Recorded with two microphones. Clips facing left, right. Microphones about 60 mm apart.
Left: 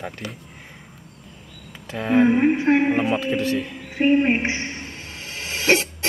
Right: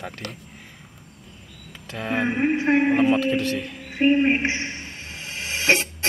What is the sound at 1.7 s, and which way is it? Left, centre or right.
A woman's voice, centre.